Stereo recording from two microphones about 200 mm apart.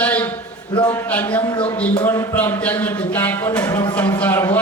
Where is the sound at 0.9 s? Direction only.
5° left (ahead or behind).